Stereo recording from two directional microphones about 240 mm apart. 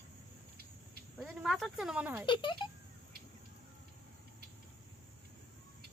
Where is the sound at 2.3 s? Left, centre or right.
Centre.